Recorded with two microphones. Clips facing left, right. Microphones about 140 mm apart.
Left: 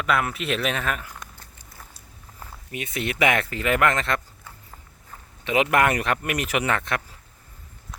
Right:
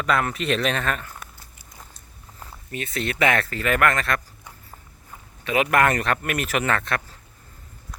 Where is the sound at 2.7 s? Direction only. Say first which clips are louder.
Right 1 dB; 15° left (ahead or behind).